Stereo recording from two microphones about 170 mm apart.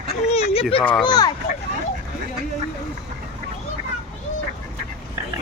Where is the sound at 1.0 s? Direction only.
25° left (ahead or behind).